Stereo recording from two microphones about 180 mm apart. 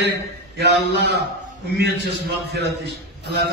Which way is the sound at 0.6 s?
70° right (ahead or behind).